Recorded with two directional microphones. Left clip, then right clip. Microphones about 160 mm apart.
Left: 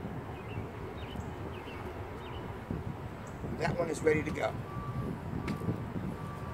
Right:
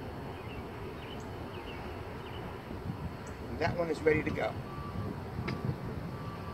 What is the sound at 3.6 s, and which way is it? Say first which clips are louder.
Speech: right 1 dB; 40° left (ahead or behind).